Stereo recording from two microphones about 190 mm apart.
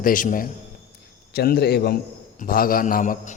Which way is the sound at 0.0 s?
45° left (ahead or behind).